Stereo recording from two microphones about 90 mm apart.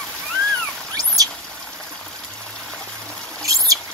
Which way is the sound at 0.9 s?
40° right (ahead or behind).